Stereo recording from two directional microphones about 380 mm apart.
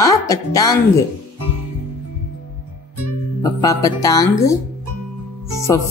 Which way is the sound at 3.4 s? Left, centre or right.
Centre.